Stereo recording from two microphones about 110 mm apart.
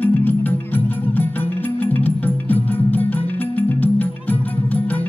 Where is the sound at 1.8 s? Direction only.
15° left (ahead or behind).